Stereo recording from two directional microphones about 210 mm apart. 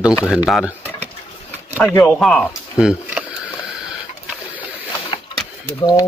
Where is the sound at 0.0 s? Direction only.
5° right (ahead or behind).